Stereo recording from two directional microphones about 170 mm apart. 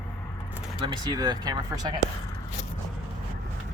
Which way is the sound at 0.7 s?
25° right (ahead or behind).